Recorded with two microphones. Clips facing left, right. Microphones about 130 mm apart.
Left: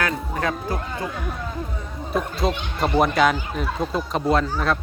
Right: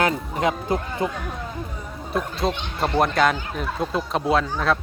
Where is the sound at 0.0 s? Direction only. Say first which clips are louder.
Right 3 dB; 20° right (ahead or behind).